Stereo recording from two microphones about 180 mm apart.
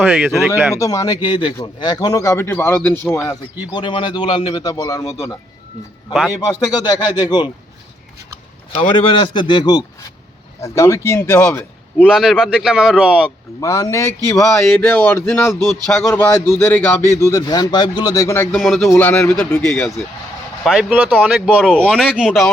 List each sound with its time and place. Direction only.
0.0 s speech: 5° right (ahead or behind)
0.7 s a man's voice: 15° left (ahead or behind)
3.7 s a man's voice: 25° left (ahead or behind)
6.3 s a man's voice: 20° left (ahead or behind)
8.7 s a man's voice: 30° left (ahead or behind); by 12.0 s 10° left (ahead or behind)
12.0 s speech: centre (ahead or behind)
13.6 s a man's voice: 15° left (ahead or behind)
14.6 s a man's voice: 5° left (ahead or behind)
18.5 s speech: centre (ahead or behind)
18.9 s a man's voice: 15° left (ahead or behind)
20.7 s speech: 5° right (ahead or behind)